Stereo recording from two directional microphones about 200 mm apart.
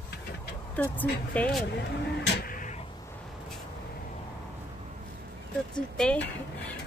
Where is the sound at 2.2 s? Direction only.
50° left (ahead or behind).